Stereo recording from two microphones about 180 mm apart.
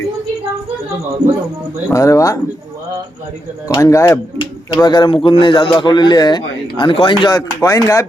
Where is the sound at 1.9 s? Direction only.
15° left (ahead or behind).